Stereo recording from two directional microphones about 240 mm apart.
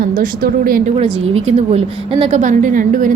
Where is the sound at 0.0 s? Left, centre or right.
Right.